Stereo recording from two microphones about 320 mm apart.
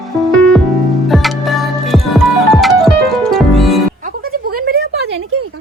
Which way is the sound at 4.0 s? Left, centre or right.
Right.